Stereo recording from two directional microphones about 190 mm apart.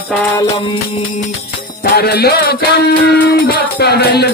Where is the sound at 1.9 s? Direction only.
55° left (ahead or behind).